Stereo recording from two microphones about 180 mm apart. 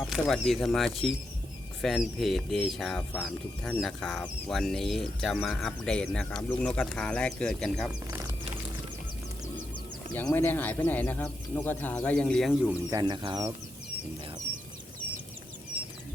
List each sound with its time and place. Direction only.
0.1 s speech: centre (ahead or behind)
10.1 s speech: 10° left (ahead or behind)
12.9 s speech: 25° right (ahead or behind)